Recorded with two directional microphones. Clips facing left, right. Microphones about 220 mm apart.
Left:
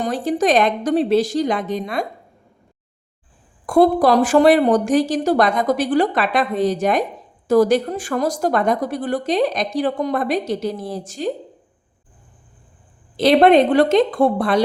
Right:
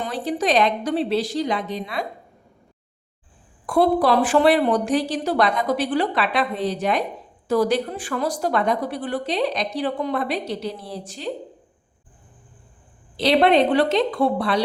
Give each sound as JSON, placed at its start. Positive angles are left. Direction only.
{"t": 0.0, "sound": "speech", "side_deg": 45}
{"t": 3.7, "sound": "speech", "side_deg": 45}
{"t": 13.1, "sound": "speech", "side_deg": 50}